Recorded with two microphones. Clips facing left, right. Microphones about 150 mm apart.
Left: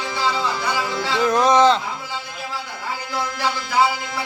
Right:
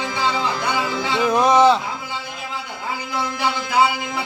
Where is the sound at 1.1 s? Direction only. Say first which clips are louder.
Even; 10° right (ahead or behind).